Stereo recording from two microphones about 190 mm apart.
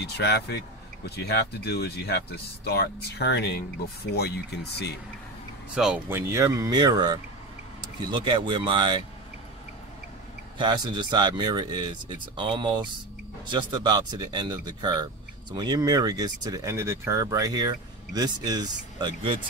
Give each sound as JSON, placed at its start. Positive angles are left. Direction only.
{"t": 0.0, "sound": "speech", "side_deg": 60}
{"t": 5.8, "sound": "speech", "side_deg": -5}
{"t": 10.6, "sound": "speech", "side_deg": -25}